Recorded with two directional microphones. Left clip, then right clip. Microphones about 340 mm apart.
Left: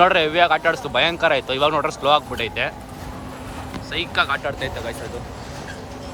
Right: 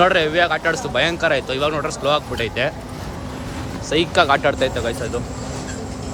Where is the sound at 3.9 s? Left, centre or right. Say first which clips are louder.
Right 6 dB; centre.